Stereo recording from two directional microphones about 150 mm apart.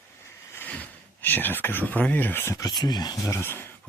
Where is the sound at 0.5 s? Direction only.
10° left (ahead or behind).